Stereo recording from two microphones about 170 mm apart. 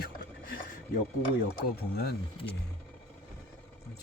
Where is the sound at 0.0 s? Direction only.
60° left (ahead or behind).